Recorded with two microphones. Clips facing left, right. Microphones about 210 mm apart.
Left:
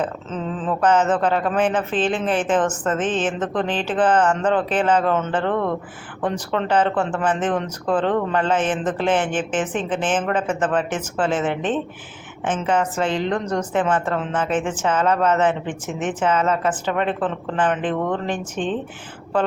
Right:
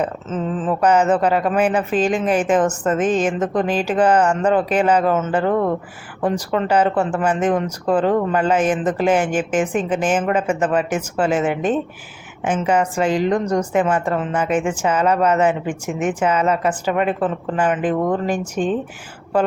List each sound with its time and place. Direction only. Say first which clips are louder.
0.0 s a woman's voice: right 3 dB; 5° right (ahead or behind)